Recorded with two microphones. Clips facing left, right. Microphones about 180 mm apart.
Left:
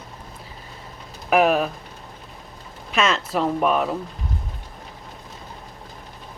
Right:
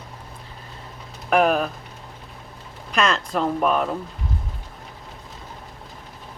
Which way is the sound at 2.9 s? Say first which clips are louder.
Even; centre (ahead or behind).